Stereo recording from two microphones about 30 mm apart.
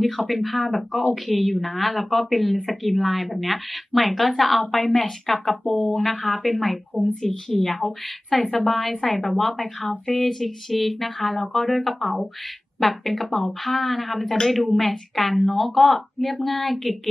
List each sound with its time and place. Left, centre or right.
0.3 s a woman's voice: centre
14.2 s a woman's voice: centre
14.5 s a woman's voice: centre